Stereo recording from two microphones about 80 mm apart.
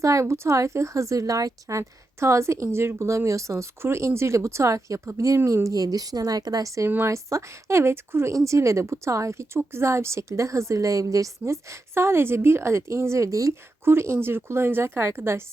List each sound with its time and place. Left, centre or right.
0.0 s speech: right
6.8 s speech: right